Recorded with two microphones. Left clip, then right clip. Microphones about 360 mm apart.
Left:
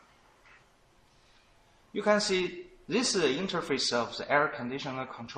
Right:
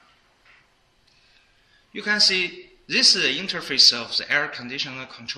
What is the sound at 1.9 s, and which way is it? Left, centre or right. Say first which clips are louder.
Speech: right 6 dB; centre.